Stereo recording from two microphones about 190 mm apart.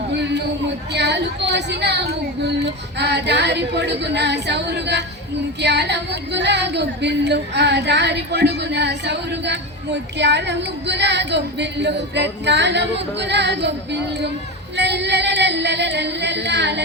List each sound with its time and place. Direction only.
0.2 s a sound: 65° right (ahead or behind)
0.9 s female singing: 65° right (ahead or behind)
14.8 s singing: 65° right (ahead or behind)